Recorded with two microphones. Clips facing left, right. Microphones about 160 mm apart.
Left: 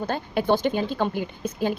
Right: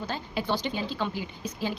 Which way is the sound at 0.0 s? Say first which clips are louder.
Left 7 dB; 55° left (ahead or behind).